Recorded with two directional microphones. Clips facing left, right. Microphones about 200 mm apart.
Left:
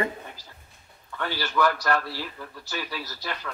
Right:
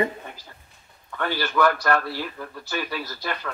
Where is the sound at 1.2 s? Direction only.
55° right (ahead or behind).